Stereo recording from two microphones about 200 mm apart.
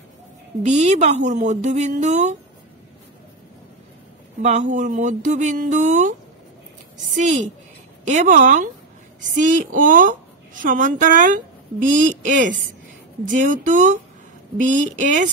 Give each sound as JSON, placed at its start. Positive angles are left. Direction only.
{"t": 0.6, "sound": "speech", "side_deg": -35}
{"t": 4.4, "sound": "speech", "side_deg": -35}